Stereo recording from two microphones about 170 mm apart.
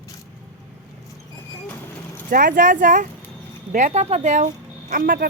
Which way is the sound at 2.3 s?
55° right (ahead or behind).